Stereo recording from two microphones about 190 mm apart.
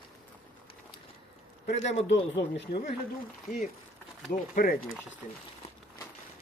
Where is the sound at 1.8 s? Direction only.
35° left (ahead or behind).